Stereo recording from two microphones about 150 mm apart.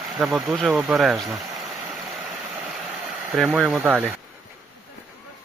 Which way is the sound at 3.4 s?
Centre (ahead or behind).